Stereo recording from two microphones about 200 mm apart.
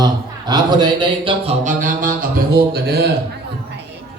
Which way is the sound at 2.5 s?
55° right (ahead or behind).